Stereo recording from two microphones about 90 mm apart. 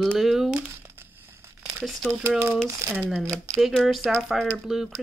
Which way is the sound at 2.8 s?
35° right (ahead or behind).